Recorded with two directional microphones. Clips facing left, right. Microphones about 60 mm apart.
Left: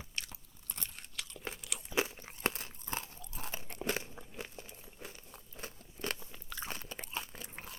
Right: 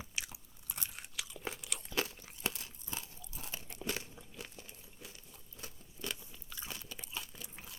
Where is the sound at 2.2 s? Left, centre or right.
Left.